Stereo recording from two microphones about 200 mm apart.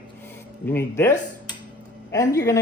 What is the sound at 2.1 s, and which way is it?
Speech, 20° left (ahead or behind).